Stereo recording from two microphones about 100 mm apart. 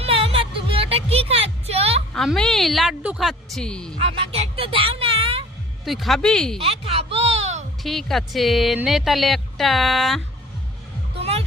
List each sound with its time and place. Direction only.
0.0 s music: 70° right (ahead or behind); by 2.0 s 90° right
2.1 s a woman's voice: 5° left (ahead or behind)
4.0 s music: 70° right (ahead or behind)
5.8 s speech: centre (ahead or behind)
6.6 s a sound: 85° right
7.8 s speech: centre (ahead or behind)
11.2 s music: 90° right